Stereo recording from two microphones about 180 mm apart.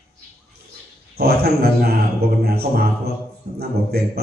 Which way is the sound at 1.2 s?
60° right (ahead or behind).